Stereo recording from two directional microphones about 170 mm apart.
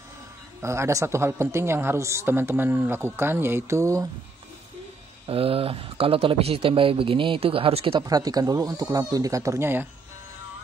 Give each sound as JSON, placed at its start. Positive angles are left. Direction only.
{"t": 0.6, "sound": "speech", "side_deg": -15}
{"t": 5.2, "sound": "speech", "side_deg": -35}
{"t": 8.0, "sound": "speech", "side_deg": -20}